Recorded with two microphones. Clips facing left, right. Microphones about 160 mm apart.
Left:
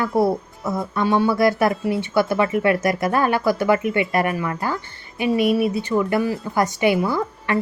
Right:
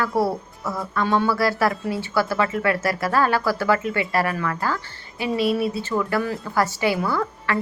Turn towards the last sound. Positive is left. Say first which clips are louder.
# left 2 dB
turn(degrees=20)  # may be behind; listen again after turning